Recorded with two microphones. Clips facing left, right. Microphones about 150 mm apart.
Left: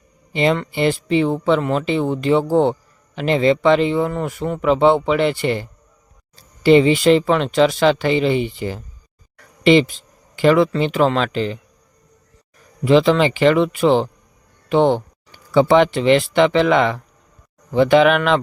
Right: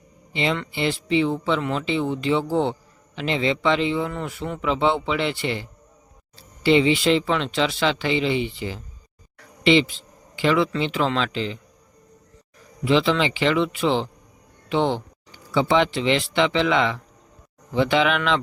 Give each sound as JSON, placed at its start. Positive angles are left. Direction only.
{"t": 0.3, "sound": "speech", "side_deg": 45}
{"t": 12.8, "sound": "speech", "side_deg": 45}